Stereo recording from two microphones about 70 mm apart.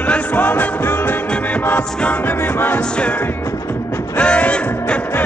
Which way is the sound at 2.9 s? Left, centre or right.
Centre.